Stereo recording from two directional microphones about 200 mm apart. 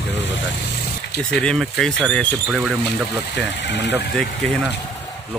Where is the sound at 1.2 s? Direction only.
5° left (ahead or behind).